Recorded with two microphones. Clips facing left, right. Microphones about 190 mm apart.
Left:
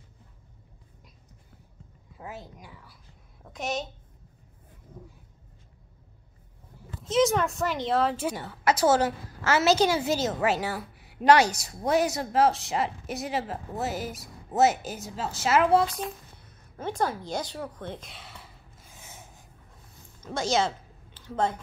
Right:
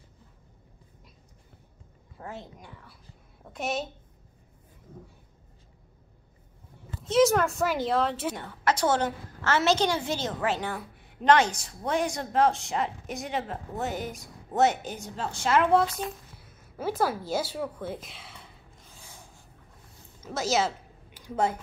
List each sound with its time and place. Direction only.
2.1 s a woman's voice: 5° left (ahead or behind)
7.0 s a woman's voice: centre (ahead or behind)
18.9 s gasp: 20° left (ahead or behind)
20.2 s a sound: 5° right (ahead or behind)